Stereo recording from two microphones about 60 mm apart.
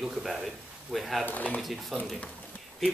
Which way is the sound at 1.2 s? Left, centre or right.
Left.